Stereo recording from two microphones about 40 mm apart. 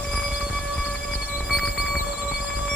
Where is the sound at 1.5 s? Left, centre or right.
Centre.